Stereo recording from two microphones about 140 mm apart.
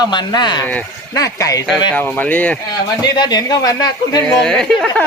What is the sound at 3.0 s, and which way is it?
Speech, 30° left (ahead or behind).